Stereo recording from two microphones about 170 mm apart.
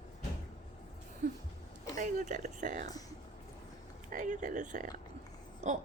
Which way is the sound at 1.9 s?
50° right (ahead or behind).